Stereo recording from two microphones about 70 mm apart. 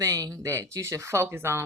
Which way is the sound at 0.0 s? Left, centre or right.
Right.